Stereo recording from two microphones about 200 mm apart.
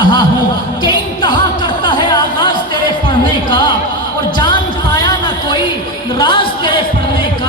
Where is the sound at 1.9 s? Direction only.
20° left (ahead or behind).